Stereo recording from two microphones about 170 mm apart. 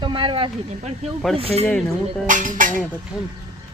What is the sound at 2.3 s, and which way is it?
Speech, 50° right (ahead or behind).